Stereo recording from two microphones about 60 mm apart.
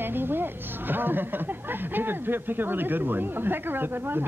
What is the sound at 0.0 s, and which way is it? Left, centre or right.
A woman's voice, right.